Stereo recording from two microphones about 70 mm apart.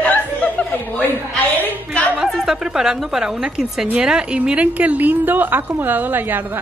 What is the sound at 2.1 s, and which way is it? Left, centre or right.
A woman's voice, centre.